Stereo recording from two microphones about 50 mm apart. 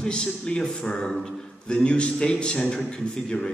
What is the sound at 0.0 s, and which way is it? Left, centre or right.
A man's voice, centre.